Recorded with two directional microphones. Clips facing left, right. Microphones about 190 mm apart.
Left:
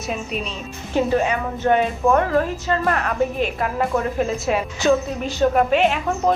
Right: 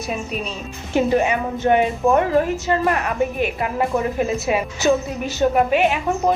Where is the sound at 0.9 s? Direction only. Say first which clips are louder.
Right 2 dB; 15° right (ahead or behind).